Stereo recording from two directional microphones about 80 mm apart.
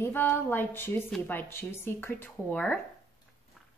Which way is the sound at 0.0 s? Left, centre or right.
Left.